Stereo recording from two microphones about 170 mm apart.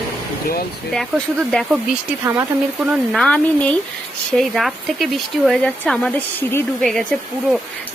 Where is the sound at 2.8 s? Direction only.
Centre (ahead or behind).